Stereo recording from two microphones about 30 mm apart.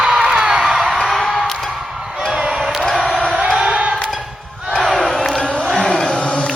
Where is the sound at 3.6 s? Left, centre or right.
Right.